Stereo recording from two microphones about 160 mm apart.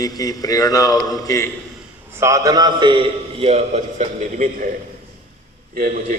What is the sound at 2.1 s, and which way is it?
A man's voice, 20° right (ahead or behind).